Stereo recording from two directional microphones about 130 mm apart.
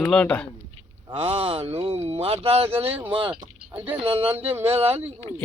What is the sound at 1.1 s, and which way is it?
Speech, 50° right (ahead or behind).